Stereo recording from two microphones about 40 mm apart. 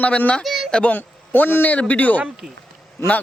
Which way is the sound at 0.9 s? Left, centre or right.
Left.